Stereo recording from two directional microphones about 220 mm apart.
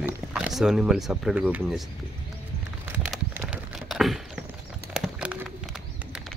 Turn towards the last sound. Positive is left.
turn(degrees=-5)  # may be behind; listen again after turning